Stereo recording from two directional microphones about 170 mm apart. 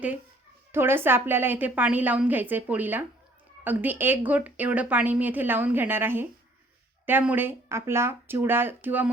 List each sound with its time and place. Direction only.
0.7 s a woman's voice: 15° right (ahead or behind)